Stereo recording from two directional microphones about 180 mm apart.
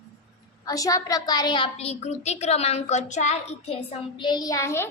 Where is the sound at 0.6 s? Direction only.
20° left (ahead or behind).